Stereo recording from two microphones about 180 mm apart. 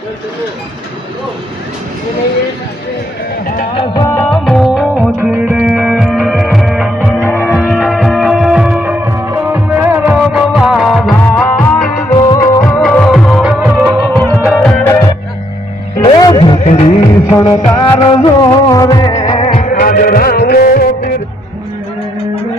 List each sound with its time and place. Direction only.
3.4 s music: 50° left (ahead or behind)
4.1 s music: 5° left (ahead or behind)
7.3 s music: 10° left (ahead or behind)
7.5 s music: 5° right (ahead or behind)
12.1 s music: 25° left (ahead or behind)
12.6 s music: 5° left (ahead or behind)
14.8 s music: 20° left (ahead or behind)
16.6 s music: 35° left (ahead or behind); by 19.4 s 20° left (ahead or behind)
19.4 s music: 40° left (ahead or behind); by 21.1 s 55° left (ahead or behind)